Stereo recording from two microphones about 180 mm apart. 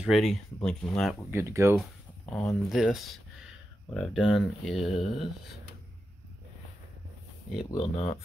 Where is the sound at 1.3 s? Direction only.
15° right (ahead or behind).